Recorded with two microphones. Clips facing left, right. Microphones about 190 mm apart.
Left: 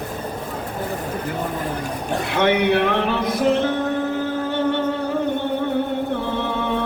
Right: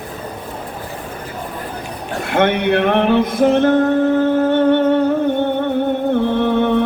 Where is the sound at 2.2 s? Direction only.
55° right (ahead or behind).